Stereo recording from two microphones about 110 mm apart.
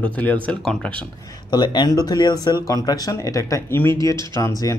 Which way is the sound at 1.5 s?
40° left (ahead or behind).